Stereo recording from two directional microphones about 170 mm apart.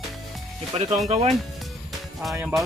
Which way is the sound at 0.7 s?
40° right (ahead or behind).